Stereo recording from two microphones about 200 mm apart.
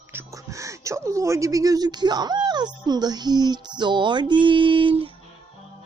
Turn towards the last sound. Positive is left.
turn(degrees=-25)  # may be behind; listen again after turning